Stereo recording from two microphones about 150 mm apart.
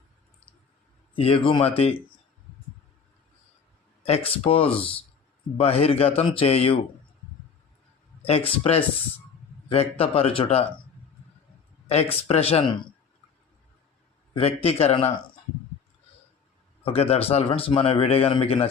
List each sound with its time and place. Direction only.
1.1 s a man's voice: 35° left (ahead or behind)
4.0 s speech: 40° left (ahead or behind)
8.2 s speech: 40° left (ahead or behind)
12.3 s speech: 40° left (ahead or behind)
14.3 s speech: 40° left (ahead or behind)
16.8 s speech: 40° left (ahead or behind)